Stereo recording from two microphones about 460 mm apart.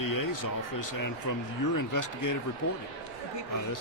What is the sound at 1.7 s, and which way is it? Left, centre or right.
Speech, left.